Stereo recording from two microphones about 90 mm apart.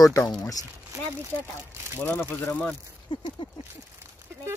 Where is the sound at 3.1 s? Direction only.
60° left (ahead or behind).